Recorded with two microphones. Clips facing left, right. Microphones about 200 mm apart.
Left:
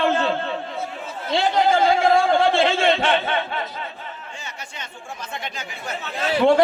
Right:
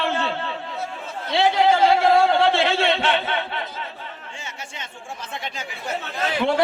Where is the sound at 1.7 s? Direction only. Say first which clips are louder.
Left 1 dB; 50° left (ahead or behind).